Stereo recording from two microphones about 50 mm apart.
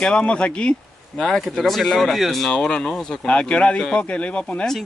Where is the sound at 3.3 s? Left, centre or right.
Left.